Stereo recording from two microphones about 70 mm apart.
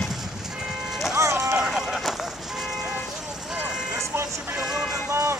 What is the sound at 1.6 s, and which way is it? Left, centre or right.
Vehicle, centre.